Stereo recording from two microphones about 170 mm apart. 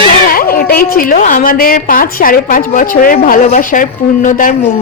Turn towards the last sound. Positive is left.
turn(degrees=50)  # may be behind; listen again after turning